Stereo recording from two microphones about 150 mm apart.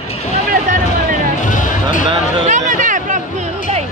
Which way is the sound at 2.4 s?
55° right (ahead or behind).